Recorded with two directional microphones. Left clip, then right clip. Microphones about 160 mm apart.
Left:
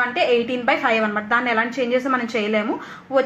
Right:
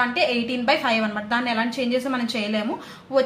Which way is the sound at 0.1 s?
30° left (ahead or behind).